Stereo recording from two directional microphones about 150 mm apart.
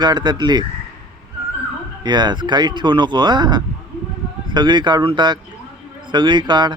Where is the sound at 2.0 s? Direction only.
30° right (ahead or behind).